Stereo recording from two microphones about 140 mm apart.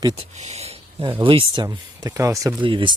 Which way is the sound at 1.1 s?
35° right (ahead or behind).